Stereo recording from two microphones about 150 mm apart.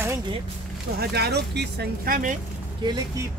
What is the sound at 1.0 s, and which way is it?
Speech, 90° right.